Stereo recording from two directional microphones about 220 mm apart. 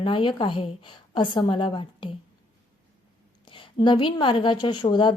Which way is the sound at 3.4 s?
20° left (ahead or behind).